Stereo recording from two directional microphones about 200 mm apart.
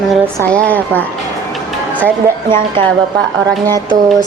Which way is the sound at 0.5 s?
10° left (ahead or behind).